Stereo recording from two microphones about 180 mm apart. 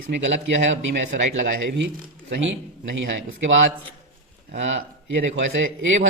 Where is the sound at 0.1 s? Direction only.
90° right.